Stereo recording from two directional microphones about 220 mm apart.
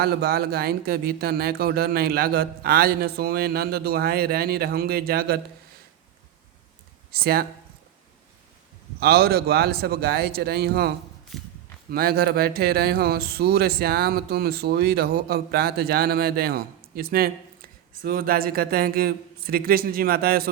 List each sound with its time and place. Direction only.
0.0 s speech: 45° right (ahead or behind)
7.1 s speech: 45° right (ahead or behind)
9.0 s speech: 45° right (ahead or behind)
11.3 s walk: centre (ahead or behind)
11.9 s speech: 45° right (ahead or behind)